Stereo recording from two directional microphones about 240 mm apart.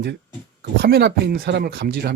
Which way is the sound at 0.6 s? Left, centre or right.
Right.